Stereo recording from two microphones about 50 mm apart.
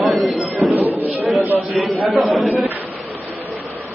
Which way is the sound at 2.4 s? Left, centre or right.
Right.